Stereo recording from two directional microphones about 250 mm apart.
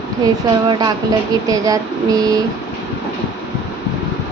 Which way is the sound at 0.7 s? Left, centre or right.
Centre.